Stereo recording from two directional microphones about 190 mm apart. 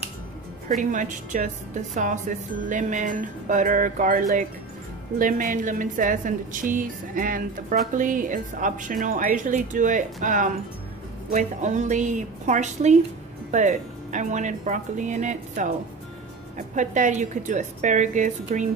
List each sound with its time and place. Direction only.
0.7 s a woman's voice: 40° right (ahead or behind)